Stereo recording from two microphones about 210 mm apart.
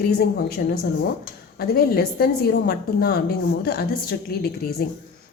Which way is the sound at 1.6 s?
45° left (ahead or behind).